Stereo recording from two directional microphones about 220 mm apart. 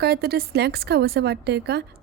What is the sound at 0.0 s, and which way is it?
A woman's voice, 45° right (ahead or behind).